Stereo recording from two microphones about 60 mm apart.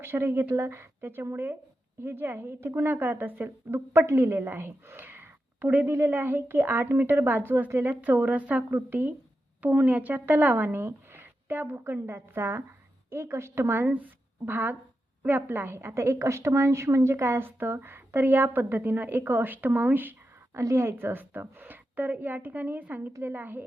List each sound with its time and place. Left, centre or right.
0.0 s a woman's voice: right
13.9 s a woman's voice: right
20.5 s a woman's voice: right